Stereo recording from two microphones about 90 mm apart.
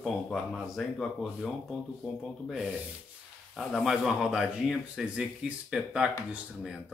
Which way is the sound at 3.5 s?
5° right (ahead or behind).